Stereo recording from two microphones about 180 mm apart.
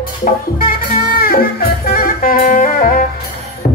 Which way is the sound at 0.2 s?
50° left (ahead or behind).